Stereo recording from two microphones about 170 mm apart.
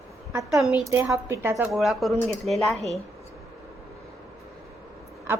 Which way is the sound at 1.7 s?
Centre (ahead or behind).